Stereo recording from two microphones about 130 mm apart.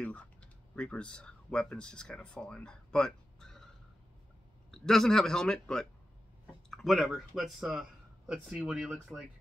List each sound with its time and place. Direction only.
0.0 s speech: 10° left (ahead or behind)
4.6 s a man's voice: 5° left (ahead or behind)